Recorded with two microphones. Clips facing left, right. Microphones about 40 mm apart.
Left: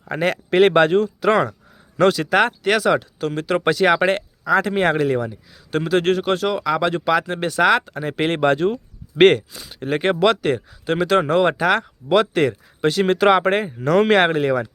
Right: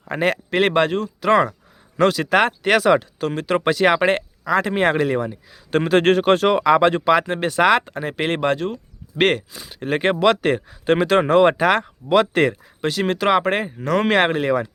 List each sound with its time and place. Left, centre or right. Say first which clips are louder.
0.0 s speech: right 1 dB; centre
0.7 s speech: left 4 dB; centre
2.3 s speech: right 1 dB; centre
5.7 s speech: right 3 dB; right
8.1 s speech: left 3 dB; centre
9.3 s speech: left 3 dB; centre
12.8 s speech: left 4 dB; centre